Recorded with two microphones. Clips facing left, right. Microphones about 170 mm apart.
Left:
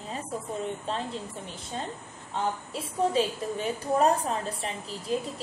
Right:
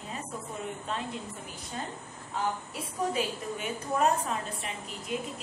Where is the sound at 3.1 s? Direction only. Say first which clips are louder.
Left 5 dB; 35° left (ahead or behind).